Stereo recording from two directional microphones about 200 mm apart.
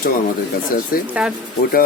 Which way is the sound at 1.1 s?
5° right (ahead or behind).